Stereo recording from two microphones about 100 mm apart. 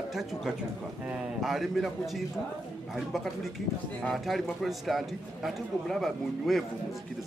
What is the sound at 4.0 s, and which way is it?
A man's voice, centre (ahead or behind).